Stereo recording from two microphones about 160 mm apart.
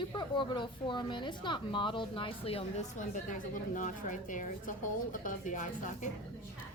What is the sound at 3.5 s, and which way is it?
A woman's voice, 55° left (ahead or behind).